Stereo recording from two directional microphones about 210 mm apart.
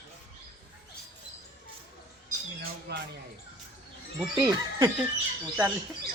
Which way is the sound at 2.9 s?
50° right (ahead or behind).